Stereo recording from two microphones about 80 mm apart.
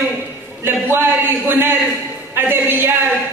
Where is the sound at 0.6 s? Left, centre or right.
Right.